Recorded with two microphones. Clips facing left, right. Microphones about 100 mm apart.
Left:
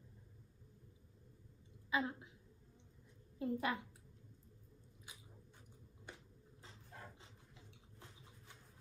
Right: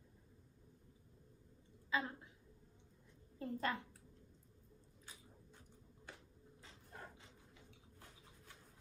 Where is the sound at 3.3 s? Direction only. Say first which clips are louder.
Left 2 dB; 15° left (ahead or behind).